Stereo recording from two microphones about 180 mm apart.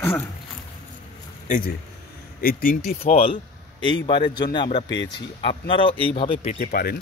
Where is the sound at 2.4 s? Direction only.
50° left (ahead or behind).